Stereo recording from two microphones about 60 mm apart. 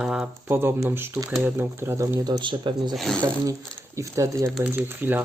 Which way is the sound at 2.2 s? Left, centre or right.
Right.